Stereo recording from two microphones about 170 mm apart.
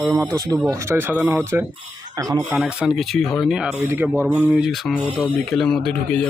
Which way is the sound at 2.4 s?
5° right (ahead or behind).